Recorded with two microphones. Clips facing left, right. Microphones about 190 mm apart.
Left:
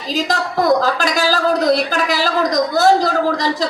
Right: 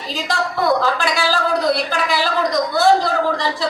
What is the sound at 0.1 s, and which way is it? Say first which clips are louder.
A woman's voice: left 3 dB; 40° left (ahead or behind).